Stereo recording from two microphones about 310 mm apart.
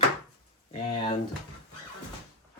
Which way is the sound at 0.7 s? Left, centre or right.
Centre.